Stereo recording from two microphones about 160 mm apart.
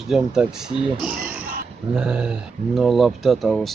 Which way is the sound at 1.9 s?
5° right (ahead or behind).